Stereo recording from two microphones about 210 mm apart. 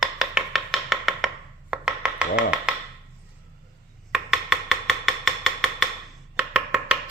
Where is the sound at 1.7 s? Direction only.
5° right (ahead or behind).